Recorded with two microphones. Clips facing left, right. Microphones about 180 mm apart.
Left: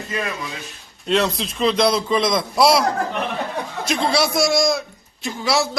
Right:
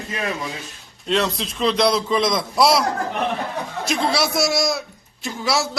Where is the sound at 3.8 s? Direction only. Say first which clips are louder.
Left 2 dB; centre (ahead or behind).